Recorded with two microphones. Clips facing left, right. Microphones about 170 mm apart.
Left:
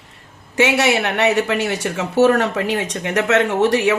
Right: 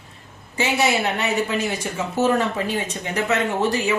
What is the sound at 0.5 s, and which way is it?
Speech, 80° left.